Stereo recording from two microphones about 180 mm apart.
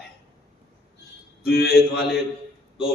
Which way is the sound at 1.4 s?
60° left (ahead or behind).